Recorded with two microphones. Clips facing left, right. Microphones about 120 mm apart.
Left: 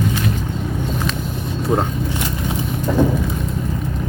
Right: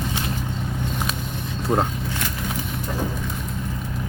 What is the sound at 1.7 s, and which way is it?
Speech, 5° left (ahead or behind).